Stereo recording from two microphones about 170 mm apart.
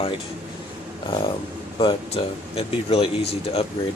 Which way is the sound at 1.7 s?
30° left (ahead or behind).